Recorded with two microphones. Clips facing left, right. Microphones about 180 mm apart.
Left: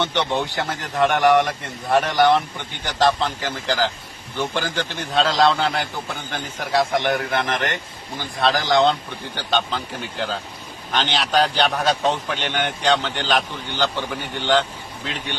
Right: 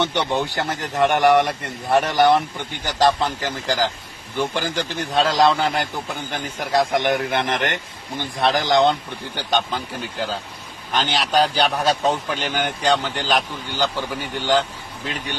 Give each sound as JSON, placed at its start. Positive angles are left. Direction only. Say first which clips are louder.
{"t": 0.0, "sound": "a man's voice", "louder": "right 1 dB", "side_deg": -15}